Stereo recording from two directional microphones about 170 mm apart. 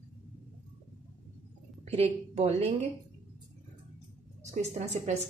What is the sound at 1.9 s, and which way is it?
Speech, 40° right (ahead or behind).